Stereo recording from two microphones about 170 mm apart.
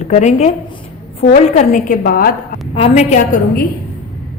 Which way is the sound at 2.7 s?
40° left (ahead or behind).